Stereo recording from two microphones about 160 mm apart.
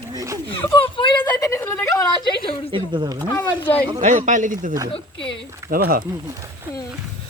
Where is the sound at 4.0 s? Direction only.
50° right (ahead or behind).